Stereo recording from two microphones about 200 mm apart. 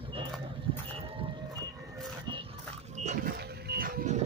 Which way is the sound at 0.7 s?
25° right (ahead or behind).